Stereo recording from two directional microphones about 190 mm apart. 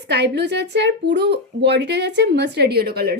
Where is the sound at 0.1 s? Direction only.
60° right (ahead or behind).